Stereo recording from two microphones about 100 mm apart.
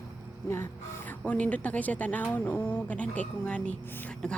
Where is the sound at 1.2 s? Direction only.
15° left (ahead or behind).